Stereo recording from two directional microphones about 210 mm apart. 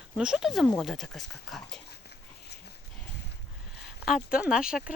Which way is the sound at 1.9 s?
50° left (ahead or behind).